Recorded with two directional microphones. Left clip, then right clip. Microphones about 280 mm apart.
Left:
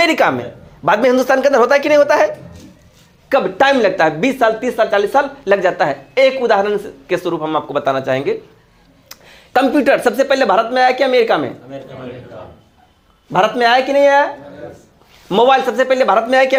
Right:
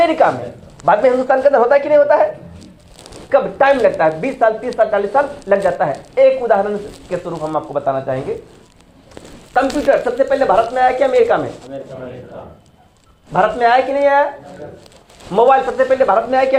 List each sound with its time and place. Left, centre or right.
0.0 s speech: left
13.3 s speech: left
15.3 s speech: left